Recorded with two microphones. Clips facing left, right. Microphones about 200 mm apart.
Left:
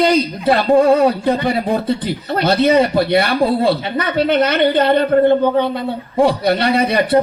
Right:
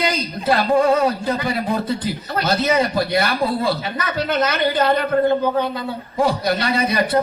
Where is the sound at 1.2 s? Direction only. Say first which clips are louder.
Left 5 dB; 30° left (ahead or behind).